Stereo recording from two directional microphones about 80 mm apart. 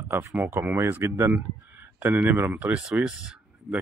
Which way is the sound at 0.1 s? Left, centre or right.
Right.